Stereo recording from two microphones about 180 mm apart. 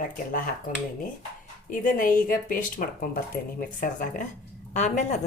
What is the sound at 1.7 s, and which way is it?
Speech, 50° left (ahead or behind).